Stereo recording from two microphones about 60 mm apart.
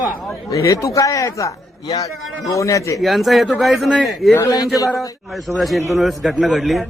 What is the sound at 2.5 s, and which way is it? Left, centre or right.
Speech, left.